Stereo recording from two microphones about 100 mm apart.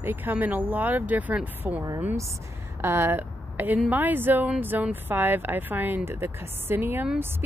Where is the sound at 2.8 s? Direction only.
25° right (ahead or behind).